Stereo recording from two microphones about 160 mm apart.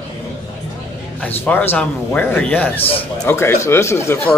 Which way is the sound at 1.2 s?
10° left (ahead or behind).